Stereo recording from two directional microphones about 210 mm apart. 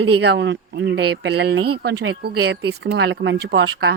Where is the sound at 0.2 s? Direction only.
55° right (ahead or behind).